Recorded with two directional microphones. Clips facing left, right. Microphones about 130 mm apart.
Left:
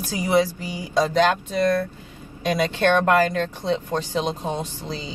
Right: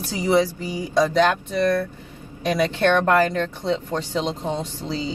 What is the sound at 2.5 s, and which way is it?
Speech, 20° left (ahead or behind).